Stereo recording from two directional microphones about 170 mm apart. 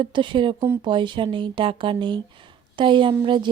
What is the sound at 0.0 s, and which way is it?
A woman's voice, 30° right (ahead or behind).